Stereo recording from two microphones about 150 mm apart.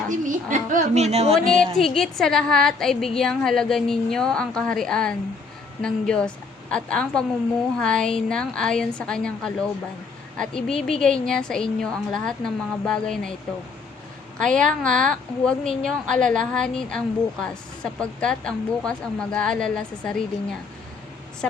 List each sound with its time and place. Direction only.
0.3 s a woman's voice: 60° right (ahead or behind)
1.5 s a woman's voice: centre (ahead or behind)
14.4 s a woman's voice: 5° left (ahead or behind)